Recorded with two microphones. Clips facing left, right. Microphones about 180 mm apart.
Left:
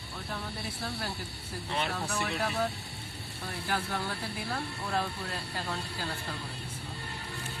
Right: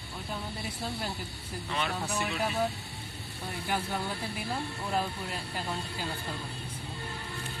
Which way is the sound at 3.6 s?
20° right (ahead or behind).